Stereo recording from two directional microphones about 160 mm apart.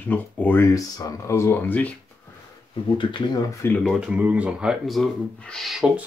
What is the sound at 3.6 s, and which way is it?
Speech, 10° left (ahead or behind).